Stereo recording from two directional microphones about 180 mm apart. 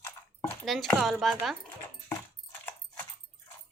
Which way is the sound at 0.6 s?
Centre (ahead or behind).